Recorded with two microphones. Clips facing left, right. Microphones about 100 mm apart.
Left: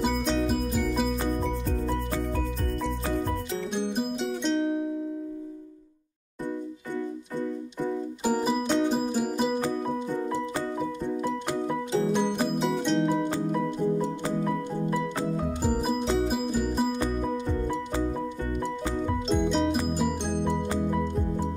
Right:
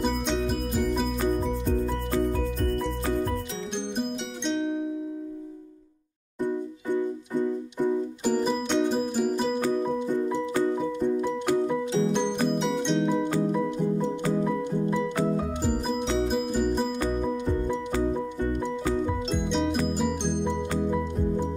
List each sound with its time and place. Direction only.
0.1 s music: centre (ahead or behind)
3.7 s music: 5° left (ahead or behind)
8.2 s music: 10° left (ahead or behind)
11.7 s music: 5° left (ahead or behind)
16.3 s music: centre (ahead or behind)
19.0 s music: centre (ahead or behind)